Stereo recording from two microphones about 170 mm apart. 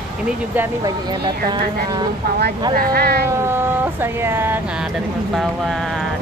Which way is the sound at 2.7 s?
60° right (ahead or behind).